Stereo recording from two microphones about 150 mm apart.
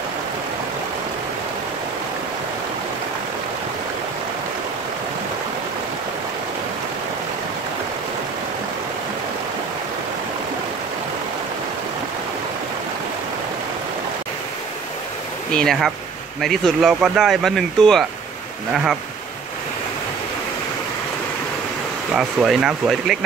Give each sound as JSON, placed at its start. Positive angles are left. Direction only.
{"t": 15.5, "sound": "speech", "side_deg": 0}
{"t": 22.1, "sound": "speech", "side_deg": -5}